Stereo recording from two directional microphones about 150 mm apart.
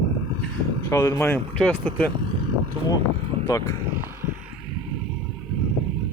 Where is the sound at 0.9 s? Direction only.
20° left (ahead or behind).